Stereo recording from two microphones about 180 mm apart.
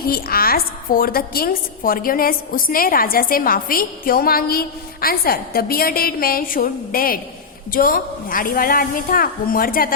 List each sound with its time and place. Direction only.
0.1 s a woman's voice: 55° left (ahead or behind)